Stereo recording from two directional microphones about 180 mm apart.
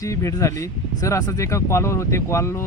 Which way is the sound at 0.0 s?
15° left (ahead or behind).